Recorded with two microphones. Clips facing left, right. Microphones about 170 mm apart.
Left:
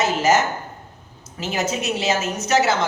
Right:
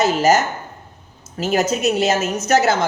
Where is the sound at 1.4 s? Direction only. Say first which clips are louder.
Right 6 dB; 45° right (ahead or behind).